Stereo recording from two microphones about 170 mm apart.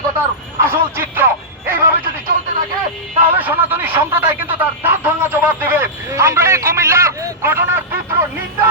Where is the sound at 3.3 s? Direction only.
10° right (ahead or behind).